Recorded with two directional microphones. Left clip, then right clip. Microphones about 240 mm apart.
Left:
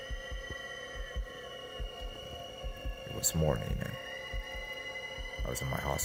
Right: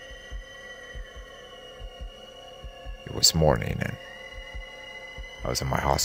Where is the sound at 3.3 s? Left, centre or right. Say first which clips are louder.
Right 10 dB; right.